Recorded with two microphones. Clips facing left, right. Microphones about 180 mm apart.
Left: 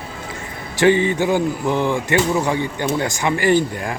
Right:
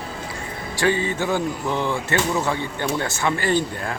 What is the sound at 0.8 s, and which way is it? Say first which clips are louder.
Speech: left 6 dB; 20° left (ahead or behind).